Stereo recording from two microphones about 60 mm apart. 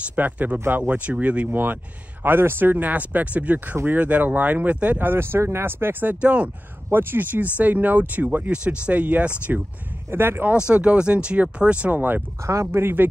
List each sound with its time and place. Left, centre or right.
0.1 s speech: right
1.5 s speech: right
3.7 s speech: right
4.0 s speech: right
6.2 s speech: centre
6.9 s speech: right
10.1 s speech: right
10.7 s speech: centre
12.4 s speech: right
12.8 s speech: right